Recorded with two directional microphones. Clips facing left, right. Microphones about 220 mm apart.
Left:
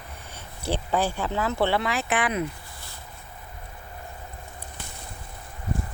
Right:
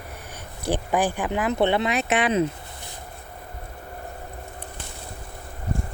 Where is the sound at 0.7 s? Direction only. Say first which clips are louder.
Right 2 dB; 15° right (ahead or behind).